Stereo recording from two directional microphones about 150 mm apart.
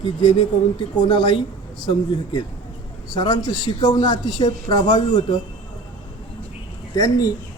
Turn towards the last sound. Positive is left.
turn(degrees=25)  # may be behind; listen again after turning